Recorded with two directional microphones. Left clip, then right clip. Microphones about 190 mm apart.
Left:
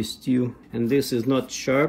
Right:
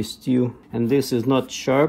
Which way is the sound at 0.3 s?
25° right (ahead or behind).